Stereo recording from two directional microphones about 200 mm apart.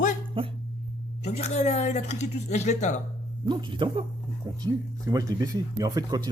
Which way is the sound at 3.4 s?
20° right (ahead or behind).